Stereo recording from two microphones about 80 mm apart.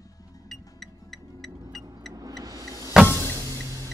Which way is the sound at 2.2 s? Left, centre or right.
Right.